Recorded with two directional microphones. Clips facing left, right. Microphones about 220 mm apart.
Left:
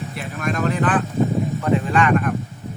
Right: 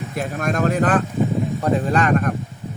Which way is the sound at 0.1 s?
45° right (ahead or behind).